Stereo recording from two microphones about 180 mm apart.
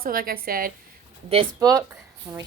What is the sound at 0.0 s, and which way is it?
Speech, 55° right (ahead or behind).